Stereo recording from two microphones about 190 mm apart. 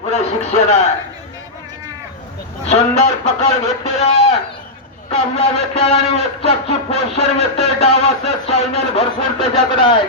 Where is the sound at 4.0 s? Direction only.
30° left (ahead or behind).